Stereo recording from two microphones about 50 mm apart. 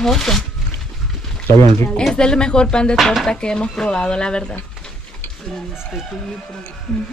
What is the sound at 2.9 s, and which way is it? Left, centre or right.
Speech, centre.